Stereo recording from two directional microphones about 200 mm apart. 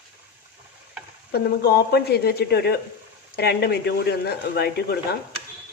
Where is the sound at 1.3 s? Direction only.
55° left (ahead or behind).